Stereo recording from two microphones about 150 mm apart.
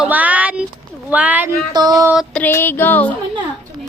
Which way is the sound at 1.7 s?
25° right (ahead or behind).